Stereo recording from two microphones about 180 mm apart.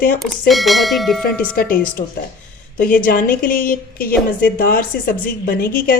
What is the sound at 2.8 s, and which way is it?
A woman's voice, 50° left (ahead or behind).